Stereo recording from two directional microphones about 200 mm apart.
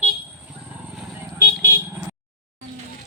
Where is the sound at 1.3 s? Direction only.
10° right (ahead or behind).